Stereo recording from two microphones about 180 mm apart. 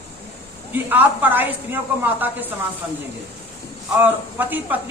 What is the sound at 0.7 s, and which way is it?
A woman's voice, 10° right (ahead or behind).